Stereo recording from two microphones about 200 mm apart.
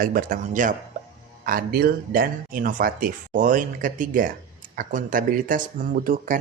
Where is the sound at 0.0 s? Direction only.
45° right (ahead or behind).